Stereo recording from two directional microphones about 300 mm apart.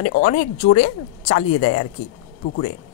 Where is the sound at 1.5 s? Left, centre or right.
Left.